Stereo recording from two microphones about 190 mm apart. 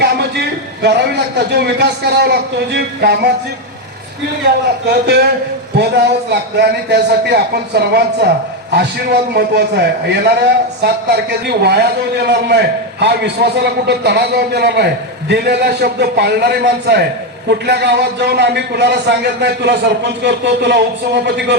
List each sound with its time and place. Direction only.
0.0 s a man's voice: 60° right (ahead or behind)
4.9 s a man's voice: 60° right (ahead or behind)
9.3 s a man's voice: 60° right (ahead or behind)